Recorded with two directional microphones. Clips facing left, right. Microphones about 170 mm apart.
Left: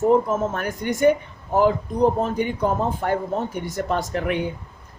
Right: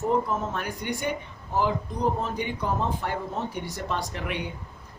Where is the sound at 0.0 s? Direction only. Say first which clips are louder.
Left 7 dB; 50° left (ahead or behind).